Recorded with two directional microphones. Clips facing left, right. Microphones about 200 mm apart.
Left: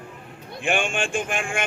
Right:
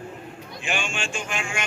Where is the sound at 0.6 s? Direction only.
55° left (ahead or behind).